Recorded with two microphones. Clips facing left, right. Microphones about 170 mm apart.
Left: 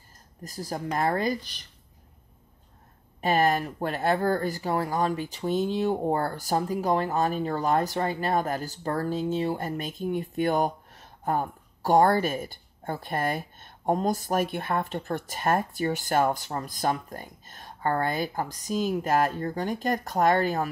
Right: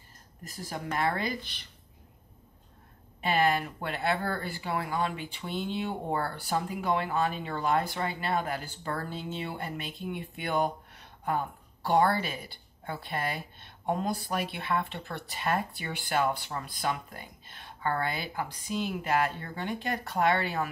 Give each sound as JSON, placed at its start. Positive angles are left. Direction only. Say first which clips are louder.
{"t": 0.4, "sound": "speech", "louder": "left 5 dB", "side_deg": 40}
{"t": 3.2, "sound": "speech", "louder": "left 3 dB", "side_deg": 45}